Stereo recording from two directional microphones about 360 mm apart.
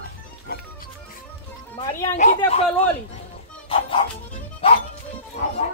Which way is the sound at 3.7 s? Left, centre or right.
Centre.